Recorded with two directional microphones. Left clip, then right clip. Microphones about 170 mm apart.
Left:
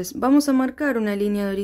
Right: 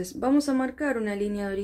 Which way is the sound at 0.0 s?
30° left (ahead or behind).